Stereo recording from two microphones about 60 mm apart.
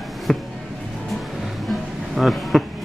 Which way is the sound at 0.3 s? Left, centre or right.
Centre.